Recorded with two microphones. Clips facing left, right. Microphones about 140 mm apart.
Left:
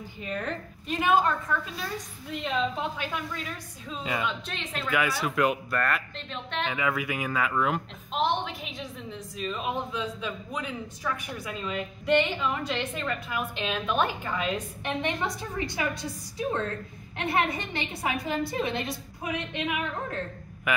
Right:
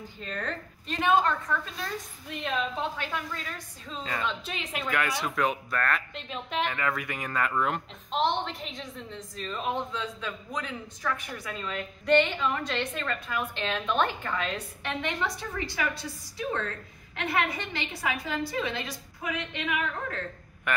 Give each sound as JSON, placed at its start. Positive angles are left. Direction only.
{"t": 0.2, "sound": "a woman's voice", "side_deg": 15}
{"t": 3.0, "sound": "a woman's voice", "side_deg": 10}
{"t": 4.5, "sound": "speech", "side_deg": -5}
{"t": 6.7, "sound": "a woman's voice", "side_deg": 5}
{"t": 20.7, "sound": "a man's voice", "side_deg": 5}